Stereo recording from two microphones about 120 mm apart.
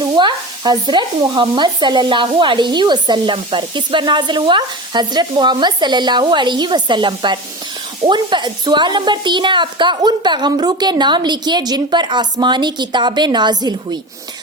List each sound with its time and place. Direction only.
0.0 s stir: 40° right (ahead or behind)